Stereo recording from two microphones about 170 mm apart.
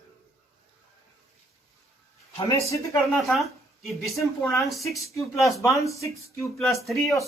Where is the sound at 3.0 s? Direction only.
Centre (ahead or behind).